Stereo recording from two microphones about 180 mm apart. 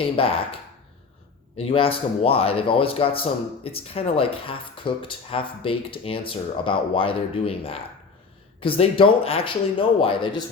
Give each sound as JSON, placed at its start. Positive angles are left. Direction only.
{"t": 0.0, "sound": "speech", "side_deg": 30}
{"t": 1.5, "sound": "speech", "side_deg": 30}